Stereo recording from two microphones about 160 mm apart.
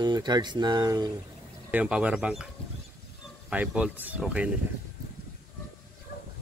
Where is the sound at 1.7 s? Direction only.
10° right (ahead or behind).